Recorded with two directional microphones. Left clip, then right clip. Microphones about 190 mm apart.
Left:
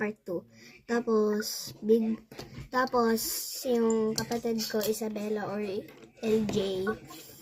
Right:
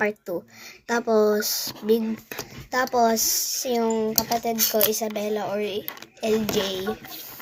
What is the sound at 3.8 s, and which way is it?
A woman's voice, 55° right (ahead or behind).